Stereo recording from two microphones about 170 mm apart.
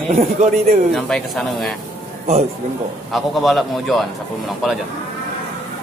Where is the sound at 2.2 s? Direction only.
40° right (ahead or behind).